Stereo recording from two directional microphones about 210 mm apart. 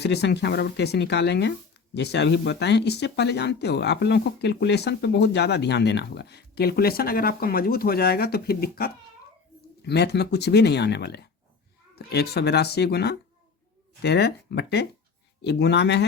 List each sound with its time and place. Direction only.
0.0 s speech: 50° left (ahead or behind)